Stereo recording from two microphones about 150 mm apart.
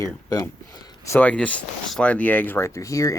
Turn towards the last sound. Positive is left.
turn(degrees=20)  # may be behind; listen again after turning